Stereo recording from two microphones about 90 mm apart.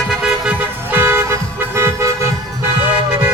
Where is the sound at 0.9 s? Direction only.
25° right (ahead or behind).